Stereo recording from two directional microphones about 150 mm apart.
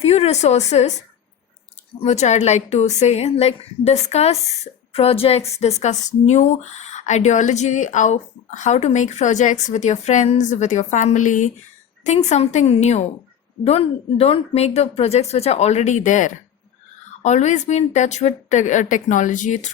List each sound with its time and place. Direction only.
0.0 s a woman's voice: 45° left (ahead or behind)
2.0 s a woman's voice: 50° left (ahead or behind)